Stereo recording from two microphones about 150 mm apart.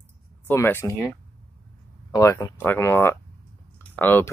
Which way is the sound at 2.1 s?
25° left (ahead or behind).